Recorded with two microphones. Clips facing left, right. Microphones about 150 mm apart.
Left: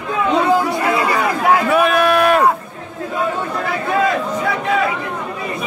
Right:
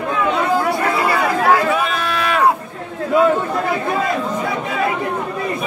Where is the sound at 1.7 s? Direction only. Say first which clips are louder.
Left 6 dB; 60° left (ahead or behind).